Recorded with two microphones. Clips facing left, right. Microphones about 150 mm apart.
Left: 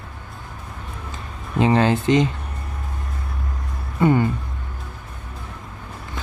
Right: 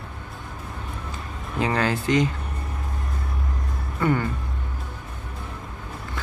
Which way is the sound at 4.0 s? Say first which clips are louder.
Left 5 dB; 20° left (ahead or behind).